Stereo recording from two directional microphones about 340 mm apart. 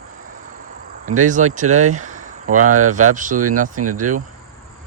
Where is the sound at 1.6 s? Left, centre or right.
Right.